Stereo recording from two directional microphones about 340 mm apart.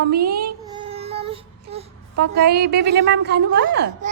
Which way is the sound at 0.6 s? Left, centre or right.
Centre.